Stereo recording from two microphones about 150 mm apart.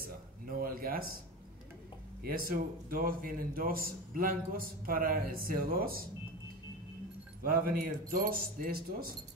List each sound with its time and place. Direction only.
0.5 s a man's voice: 75° right (ahead or behind)
2.2 s a man's voice: 75° right (ahead or behind)
7.4 s a man's voice: 70° right (ahead or behind)